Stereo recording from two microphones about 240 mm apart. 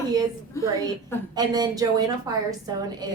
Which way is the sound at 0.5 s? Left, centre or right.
Centre.